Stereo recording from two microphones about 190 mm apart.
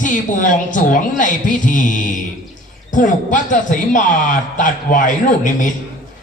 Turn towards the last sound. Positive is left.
turn(degrees=40)  # may be behind; listen again after turning